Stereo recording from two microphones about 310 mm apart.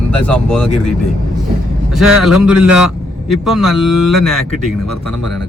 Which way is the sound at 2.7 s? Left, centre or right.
Left.